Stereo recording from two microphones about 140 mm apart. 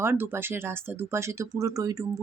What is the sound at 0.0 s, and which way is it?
Speech, 15° right (ahead or behind).